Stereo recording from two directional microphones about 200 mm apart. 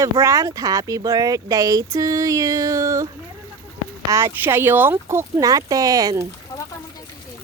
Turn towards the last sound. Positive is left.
turn(degrees=-20)  # may be behind; listen again after turning